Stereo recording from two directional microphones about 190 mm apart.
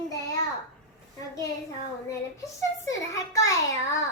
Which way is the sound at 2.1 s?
15° left (ahead or behind).